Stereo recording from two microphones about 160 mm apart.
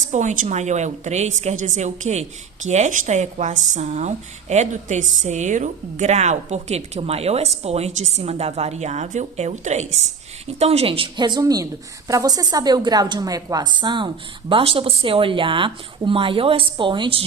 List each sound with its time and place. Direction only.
0.1 s a woman's voice: 50° right (ahead or behind); by 17.2 s 30° right (ahead or behind)